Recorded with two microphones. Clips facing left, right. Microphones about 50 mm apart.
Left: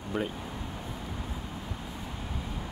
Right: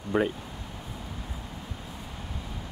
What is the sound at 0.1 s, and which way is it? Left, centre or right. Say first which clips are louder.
Speech: right 7 dB; right.